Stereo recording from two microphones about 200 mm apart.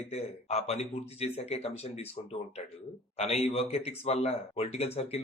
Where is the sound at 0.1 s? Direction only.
30° left (ahead or behind).